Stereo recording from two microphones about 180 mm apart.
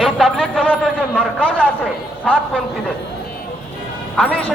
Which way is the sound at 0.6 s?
5° left (ahead or behind).